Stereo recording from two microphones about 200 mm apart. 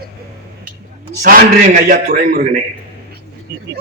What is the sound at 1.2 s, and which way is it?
A man's voice, 50° right (ahead or behind).